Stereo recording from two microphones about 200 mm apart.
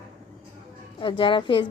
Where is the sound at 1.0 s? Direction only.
25° left (ahead or behind).